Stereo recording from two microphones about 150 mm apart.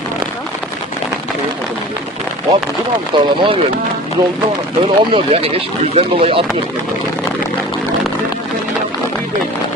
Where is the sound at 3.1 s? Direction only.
30° right (ahead or behind).